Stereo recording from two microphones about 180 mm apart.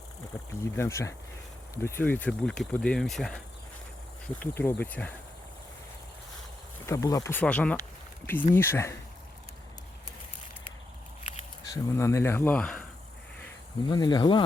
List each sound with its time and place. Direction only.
0.6 s speech: 15° left (ahead or behind)
6.8 s speech: 15° left (ahead or behind)
11.6 s speech: 15° left (ahead or behind)
13.9 s speech: 25° left (ahead or behind)